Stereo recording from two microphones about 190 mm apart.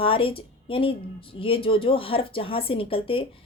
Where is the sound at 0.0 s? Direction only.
30° left (ahead or behind).